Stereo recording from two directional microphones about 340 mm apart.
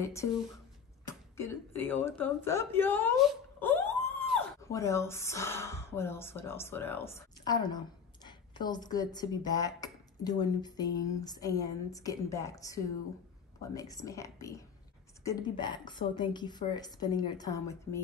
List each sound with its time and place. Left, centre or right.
0.0 s a woman's voice: centre
1.3 s a woman's voice: centre